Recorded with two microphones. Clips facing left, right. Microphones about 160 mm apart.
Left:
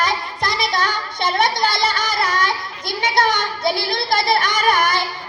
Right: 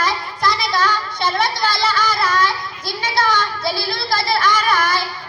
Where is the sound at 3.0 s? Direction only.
20° left (ahead or behind).